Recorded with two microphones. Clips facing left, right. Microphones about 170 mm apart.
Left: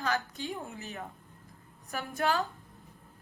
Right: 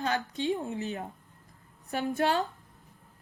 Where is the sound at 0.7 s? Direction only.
35° right (ahead or behind).